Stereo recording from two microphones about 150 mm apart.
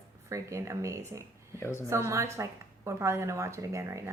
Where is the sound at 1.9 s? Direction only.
20° right (ahead or behind).